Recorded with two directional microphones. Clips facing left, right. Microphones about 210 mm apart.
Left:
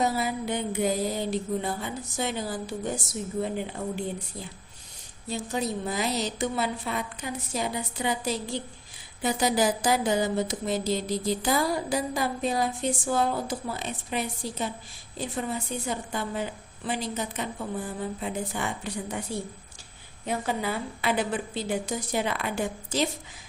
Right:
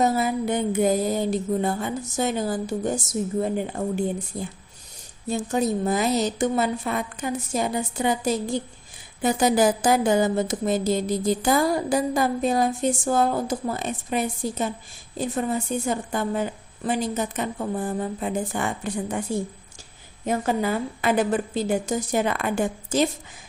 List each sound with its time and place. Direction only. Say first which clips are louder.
0.0 s a woman's voice: right 5 dB; 50° right (ahead or behind)